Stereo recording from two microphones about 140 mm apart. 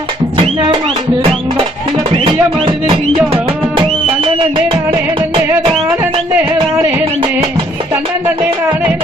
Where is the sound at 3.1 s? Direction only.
40° right (ahead or behind).